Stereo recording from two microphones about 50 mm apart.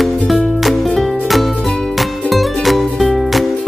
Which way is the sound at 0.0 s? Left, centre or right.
Centre.